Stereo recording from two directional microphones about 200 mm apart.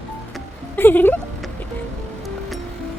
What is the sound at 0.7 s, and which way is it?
Speech, 10° left (ahead or behind).